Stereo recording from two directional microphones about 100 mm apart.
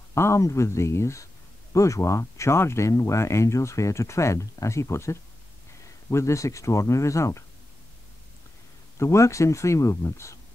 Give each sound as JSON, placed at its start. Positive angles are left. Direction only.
{"t": 0.1, "sound": "speech", "side_deg": 30}
{"t": 8.9, "sound": "speech", "side_deg": 30}